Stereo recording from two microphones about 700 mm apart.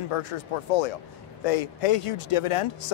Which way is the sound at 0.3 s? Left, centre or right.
Left.